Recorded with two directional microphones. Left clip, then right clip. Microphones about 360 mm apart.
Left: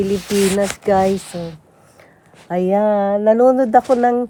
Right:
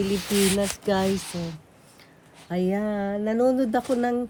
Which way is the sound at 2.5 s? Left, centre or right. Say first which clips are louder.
Left 9 dB; centre.